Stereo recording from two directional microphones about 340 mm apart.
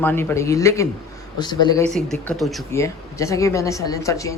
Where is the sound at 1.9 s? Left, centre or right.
Centre.